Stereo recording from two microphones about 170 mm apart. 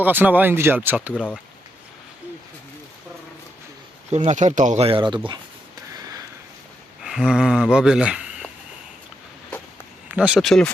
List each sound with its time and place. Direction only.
0.0 s speech: 10° right (ahead or behind)
1.1 s speech: 5° left (ahead or behind)
4.1 s speech: 40° right (ahead or behind); by 5.4 s 25° right (ahead or behind)
7.0 s speech: 5° right (ahead or behind)
10.1 s speech: 5° right (ahead or behind)